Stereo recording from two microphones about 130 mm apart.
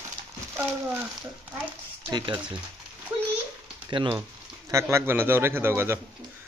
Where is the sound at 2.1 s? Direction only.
35° right (ahead or behind).